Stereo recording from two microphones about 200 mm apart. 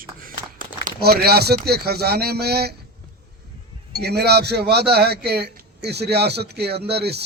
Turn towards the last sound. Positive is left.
turn(degrees=-55)  # may be behind; listen again after turning